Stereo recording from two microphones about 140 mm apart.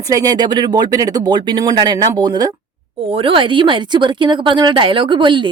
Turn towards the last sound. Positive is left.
turn(degrees=-35)  # may be behind; listen again after turning